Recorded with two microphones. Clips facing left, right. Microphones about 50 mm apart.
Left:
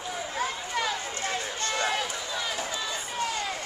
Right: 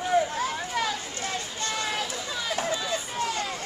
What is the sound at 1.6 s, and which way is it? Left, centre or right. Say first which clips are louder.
Run: left 2 dB; centre.